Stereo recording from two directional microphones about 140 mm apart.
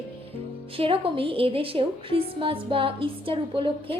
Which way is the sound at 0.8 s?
40° right (ahead or behind).